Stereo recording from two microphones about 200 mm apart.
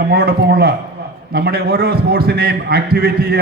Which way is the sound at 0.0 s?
50° right (ahead or behind).